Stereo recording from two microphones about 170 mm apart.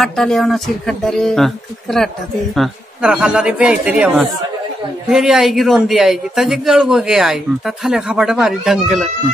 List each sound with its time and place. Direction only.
0.0 s a man's voice: centre (ahead or behind)